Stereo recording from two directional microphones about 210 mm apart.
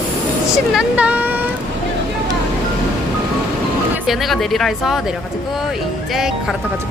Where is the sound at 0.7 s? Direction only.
5° right (ahead or behind).